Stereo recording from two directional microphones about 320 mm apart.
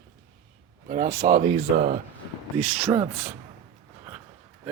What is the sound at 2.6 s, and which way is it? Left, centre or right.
Speech, centre.